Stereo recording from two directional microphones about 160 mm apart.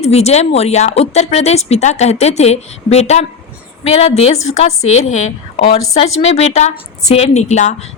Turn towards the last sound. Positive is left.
turn(degrees=45)  # may be behind; listen again after turning